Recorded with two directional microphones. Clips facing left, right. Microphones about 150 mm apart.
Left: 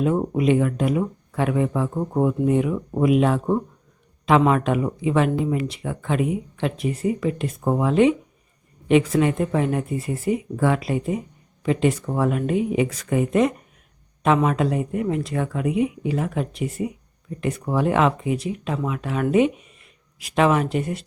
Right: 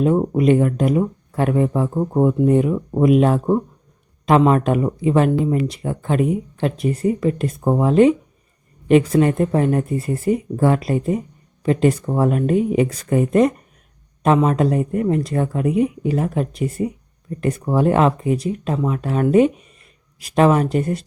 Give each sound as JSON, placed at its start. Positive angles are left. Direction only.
{"t": 0.3, "sound": "speech", "side_deg": -45}
{"t": 2.0, "sound": "speech", "side_deg": -20}
{"t": 2.4, "sound": "a woman's voice", "side_deg": -40}
{"t": 9.2, "sound": "a woman's voice", "side_deg": -45}